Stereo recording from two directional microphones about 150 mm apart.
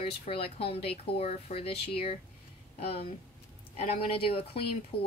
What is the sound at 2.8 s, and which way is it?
Speech, 40° left (ahead or behind).